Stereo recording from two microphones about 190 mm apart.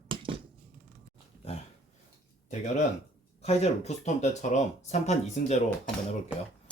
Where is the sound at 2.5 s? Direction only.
40° left (ahead or behind).